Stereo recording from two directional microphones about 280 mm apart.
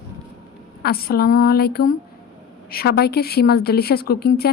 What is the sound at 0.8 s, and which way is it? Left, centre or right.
A woman's voice, left.